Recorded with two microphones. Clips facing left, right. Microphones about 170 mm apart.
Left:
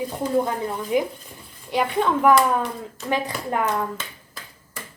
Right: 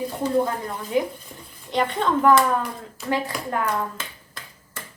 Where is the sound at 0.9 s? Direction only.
15° left (ahead or behind).